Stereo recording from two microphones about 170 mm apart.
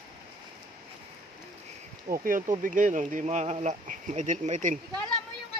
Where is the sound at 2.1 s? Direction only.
55° right (ahead or behind).